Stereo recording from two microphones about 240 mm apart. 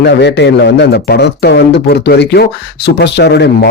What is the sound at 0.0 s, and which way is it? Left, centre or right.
A man's voice, left.